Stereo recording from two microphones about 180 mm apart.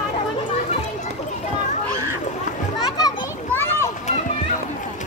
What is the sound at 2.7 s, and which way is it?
Children playing, 20° left (ahead or behind).